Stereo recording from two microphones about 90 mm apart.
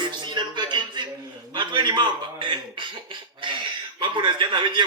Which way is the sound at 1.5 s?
60° right (ahead or behind).